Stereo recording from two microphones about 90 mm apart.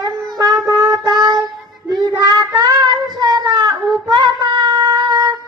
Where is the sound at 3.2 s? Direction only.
50° right (ahead or behind).